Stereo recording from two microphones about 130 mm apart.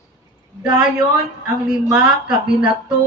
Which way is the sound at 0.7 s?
5° right (ahead or behind).